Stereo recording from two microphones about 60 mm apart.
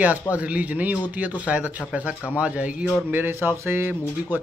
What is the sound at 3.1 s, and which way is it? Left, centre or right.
Speech, right.